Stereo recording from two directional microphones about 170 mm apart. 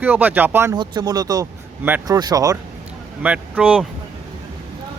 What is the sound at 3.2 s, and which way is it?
Speech, 10° right (ahead or behind).